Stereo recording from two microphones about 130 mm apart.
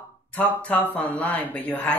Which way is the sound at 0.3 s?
10° left (ahead or behind).